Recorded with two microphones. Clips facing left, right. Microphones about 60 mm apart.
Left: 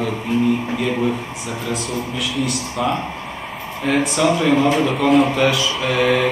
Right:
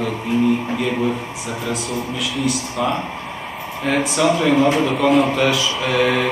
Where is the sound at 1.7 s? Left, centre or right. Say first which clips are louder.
Left 1 dB; centre.